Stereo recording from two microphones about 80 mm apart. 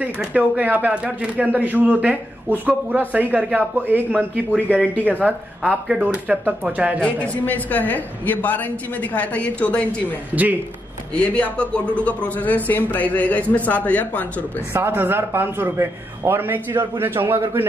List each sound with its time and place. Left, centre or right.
0.0 s speech: centre
7.0 s speech: centre
10.3 s speech: right
11.1 s speech: centre
14.7 s speech: right